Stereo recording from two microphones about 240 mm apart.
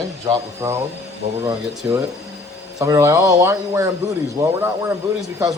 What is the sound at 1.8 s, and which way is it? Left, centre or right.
Speech, centre.